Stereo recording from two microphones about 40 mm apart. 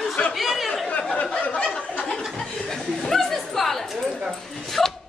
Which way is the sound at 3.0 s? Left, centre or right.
Centre.